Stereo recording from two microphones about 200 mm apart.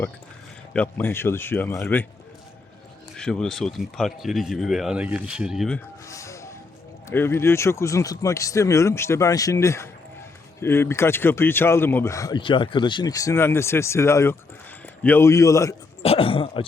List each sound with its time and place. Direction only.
0.7 s speech: 10° left (ahead or behind)
3.2 s speech: 5° left (ahead or behind)
6.1 s music: 15° left (ahead or behind)
7.1 s speech: 10° left (ahead or behind)
16.0 s speech: 25° left (ahead or behind)